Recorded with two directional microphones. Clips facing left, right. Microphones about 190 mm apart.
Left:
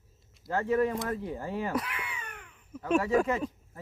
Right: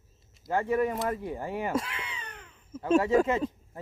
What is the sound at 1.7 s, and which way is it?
Speech, 25° right (ahead or behind).